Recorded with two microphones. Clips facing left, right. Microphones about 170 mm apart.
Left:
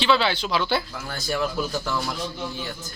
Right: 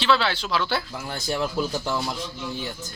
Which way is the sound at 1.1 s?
25° right (ahead or behind).